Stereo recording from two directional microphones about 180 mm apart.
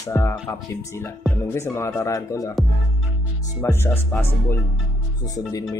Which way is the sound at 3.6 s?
15° left (ahead or behind).